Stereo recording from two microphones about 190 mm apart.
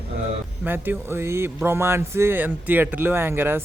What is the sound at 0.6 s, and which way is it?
Speech, 10° right (ahead or behind).